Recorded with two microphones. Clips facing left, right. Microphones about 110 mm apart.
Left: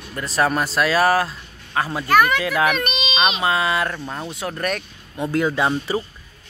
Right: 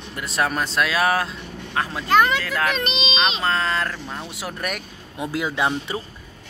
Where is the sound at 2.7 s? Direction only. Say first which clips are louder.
Left 1 dB; 25° right (ahead or behind).